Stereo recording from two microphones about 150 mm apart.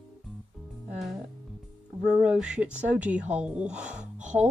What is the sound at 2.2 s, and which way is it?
Speech, 5° right (ahead or behind).